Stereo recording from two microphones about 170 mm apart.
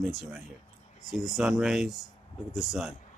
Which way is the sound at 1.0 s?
Centre (ahead or behind).